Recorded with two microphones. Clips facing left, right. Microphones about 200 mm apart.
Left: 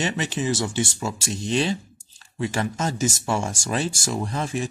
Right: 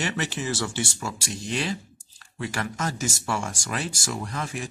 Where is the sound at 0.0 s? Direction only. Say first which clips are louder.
Left 4 dB; 20° left (ahead or behind).